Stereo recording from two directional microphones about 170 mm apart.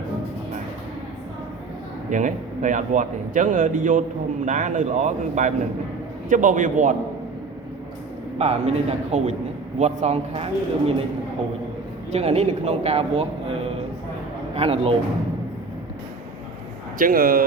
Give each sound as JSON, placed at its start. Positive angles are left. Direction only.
{"t": 2.0, "sound": "a man's voice", "side_deg": -50}
{"t": 8.4, "sound": "speech", "side_deg": -40}
{"t": 12.1, "sound": "speech", "side_deg": -40}
{"t": 17.0, "sound": "speech", "side_deg": -60}